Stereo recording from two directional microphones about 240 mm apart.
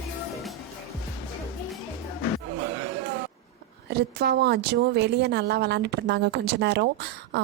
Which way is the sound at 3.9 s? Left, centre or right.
Right.